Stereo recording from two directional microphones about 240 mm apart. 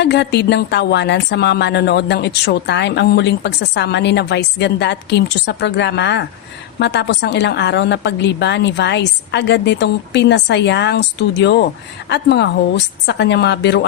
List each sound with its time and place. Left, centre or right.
0.0 s a woman's voice: left